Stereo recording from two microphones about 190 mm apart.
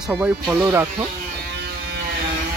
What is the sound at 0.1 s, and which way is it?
Speech, 10° right (ahead or behind).